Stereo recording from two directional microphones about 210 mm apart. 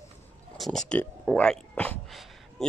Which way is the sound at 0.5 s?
Centre (ahead or behind).